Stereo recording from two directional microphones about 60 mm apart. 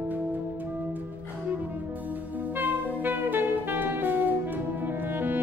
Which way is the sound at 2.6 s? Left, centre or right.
Right.